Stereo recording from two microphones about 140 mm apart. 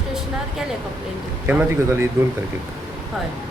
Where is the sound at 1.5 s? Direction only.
15° right (ahead or behind).